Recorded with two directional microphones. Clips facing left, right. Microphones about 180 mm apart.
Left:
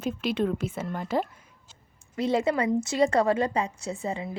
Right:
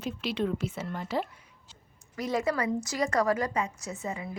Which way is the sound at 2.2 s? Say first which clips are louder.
Left 4 dB; 25° left (ahead or behind).